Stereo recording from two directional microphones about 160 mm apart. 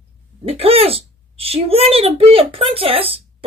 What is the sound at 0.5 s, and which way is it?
A woman's voice, 35° right (ahead or behind).